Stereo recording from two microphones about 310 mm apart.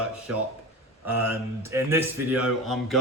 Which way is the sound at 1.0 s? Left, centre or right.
Centre.